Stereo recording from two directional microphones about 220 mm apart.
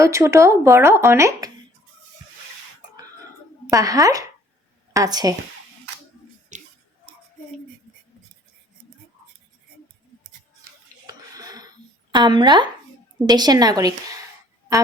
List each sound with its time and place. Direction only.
0.0 s speech: 15° right (ahead or behind)
3.7 s speech: 15° right (ahead or behind)
6.5 s music: 35° right (ahead or behind)
11.0 s a sound: 15° right (ahead or behind)
12.1 s speech: 20° right (ahead or behind)